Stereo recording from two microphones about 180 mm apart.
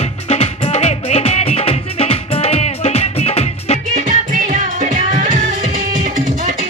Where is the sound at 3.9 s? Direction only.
45° right (ahead or behind).